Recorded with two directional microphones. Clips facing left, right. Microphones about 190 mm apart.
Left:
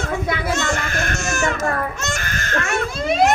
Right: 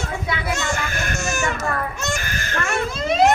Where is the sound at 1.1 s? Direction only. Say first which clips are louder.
Left 1 dB; 15° right (ahead or behind).